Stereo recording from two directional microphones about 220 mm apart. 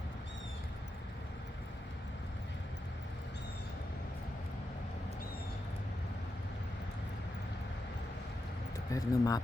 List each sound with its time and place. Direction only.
8.9 s speech: 15° left (ahead or behind)